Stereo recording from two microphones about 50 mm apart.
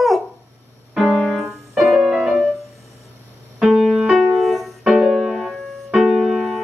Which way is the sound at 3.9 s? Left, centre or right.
Centre.